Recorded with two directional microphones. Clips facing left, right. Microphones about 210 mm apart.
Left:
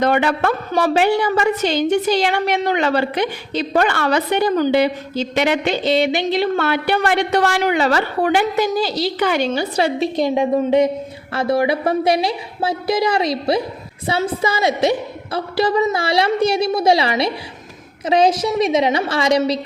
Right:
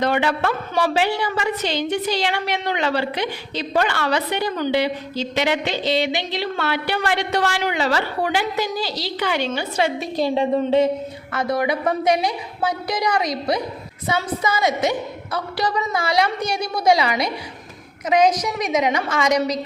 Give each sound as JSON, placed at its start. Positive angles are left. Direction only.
{"t": 0.0, "sound": "a woman's voice", "side_deg": 50}
{"t": 9.5, "sound": "a woman's voice", "side_deg": 35}
{"t": 10.2, "sound": "a woman's voice", "side_deg": 15}
{"t": 11.3, "sound": "a woman's voice", "side_deg": 30}